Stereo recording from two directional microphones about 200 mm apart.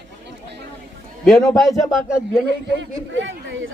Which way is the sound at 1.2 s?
Centre (ahead or behind).